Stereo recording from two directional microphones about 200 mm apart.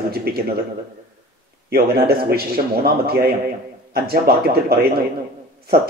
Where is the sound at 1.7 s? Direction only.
50° right (ahead or behind).